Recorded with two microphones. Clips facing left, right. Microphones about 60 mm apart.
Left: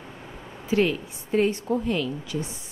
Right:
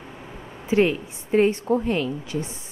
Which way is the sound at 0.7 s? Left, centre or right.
Right.